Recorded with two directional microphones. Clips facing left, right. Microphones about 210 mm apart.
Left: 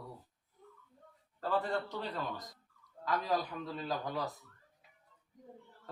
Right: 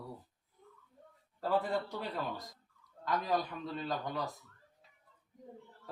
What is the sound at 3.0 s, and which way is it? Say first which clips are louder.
A man's voice: even; centre (ahead or behind).